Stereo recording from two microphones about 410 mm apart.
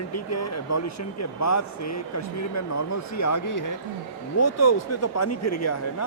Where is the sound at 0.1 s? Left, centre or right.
Left.